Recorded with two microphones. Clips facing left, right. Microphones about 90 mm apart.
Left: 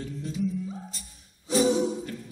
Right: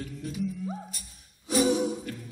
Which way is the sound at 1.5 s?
30° left (ahead or behind).